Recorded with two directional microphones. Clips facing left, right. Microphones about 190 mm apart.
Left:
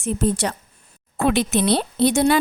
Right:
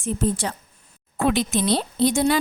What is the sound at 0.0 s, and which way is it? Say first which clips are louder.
Speech: left 2 dB; 75° left (ahead or behind).